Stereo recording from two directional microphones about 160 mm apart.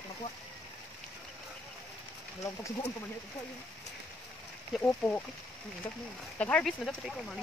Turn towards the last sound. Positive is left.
turn(degrees=5)  # may be behind; listen again after turning